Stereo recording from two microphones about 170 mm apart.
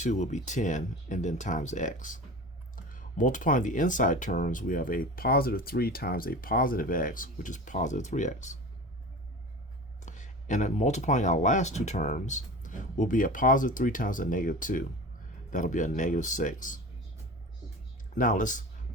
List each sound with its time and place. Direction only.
0.0 s speech: 45° left (ahead or behind)
10.0 s speech: 45° left (ahead or behind)
18.1 s speech: 50° left (ahead or behind)